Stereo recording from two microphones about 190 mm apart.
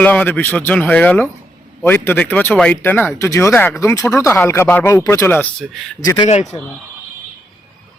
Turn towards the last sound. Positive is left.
turn(degrees=35)  # may be behind; listen again after turning